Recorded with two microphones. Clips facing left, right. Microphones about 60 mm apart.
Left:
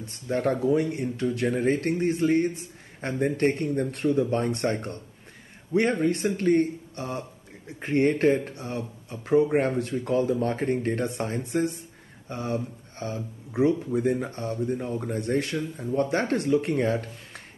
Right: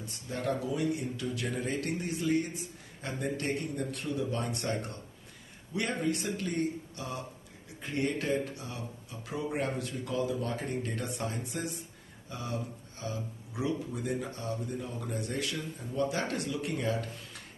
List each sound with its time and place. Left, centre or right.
0.0 s speech: left